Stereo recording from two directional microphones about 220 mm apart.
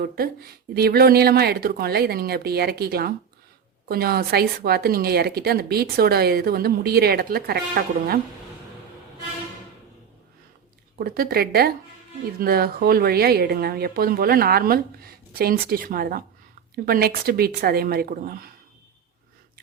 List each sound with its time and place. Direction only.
0.0 s speech: 45° right (ahead or behind)
10.9 s speech: 40° right (ahead or behind)